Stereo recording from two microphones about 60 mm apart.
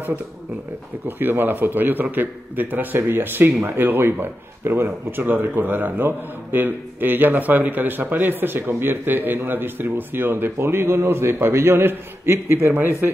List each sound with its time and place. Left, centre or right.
1.0 s speech: right